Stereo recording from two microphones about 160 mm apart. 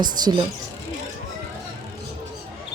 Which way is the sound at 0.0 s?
25° right (ahead or behind).